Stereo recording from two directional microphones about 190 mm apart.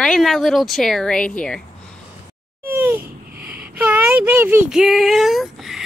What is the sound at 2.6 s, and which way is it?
Babbling, 10° right (ahead or behind).